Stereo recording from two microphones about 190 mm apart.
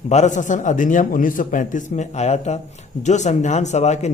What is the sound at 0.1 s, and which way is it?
Speech, 40° left (ahead or behind).